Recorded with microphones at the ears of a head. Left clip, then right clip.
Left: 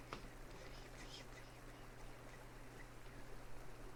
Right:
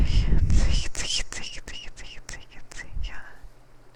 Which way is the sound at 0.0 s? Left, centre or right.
Right.